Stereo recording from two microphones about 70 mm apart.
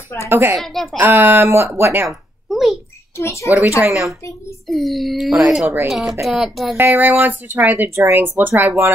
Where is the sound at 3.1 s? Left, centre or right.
Left.